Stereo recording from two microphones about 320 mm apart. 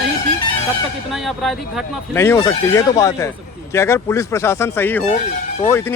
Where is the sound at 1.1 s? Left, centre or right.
Centre.